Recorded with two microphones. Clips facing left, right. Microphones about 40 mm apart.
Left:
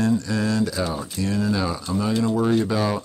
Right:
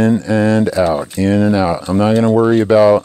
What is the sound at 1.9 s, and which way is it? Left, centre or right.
Speech, right.